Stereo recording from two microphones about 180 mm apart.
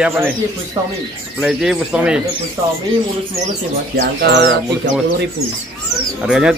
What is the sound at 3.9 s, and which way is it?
Speech, 65° right (ahead or behind).